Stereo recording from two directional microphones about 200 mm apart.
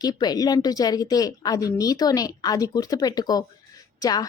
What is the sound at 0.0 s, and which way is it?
A woman's voice, 20° left (ahead or behind).